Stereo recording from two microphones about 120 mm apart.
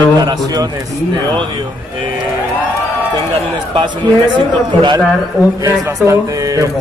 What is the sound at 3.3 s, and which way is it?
A man's voice, 50° right (ahead or behind).